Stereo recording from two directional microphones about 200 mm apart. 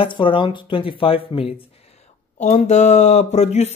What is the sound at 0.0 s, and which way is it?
Speech, 25° left (ahead or behind).